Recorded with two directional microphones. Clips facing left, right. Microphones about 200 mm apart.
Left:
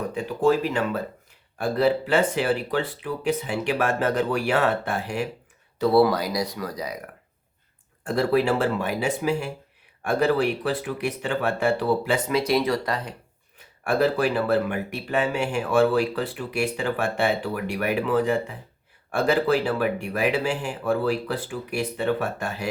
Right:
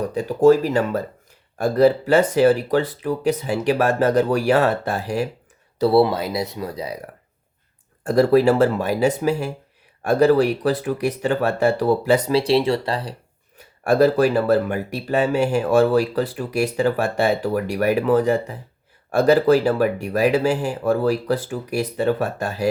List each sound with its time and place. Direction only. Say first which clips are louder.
0.1 s speech: right 8 dB; 40° right (ahead or behind)
8.0 s speech: right 7 dB; 40° right (ahead or behind)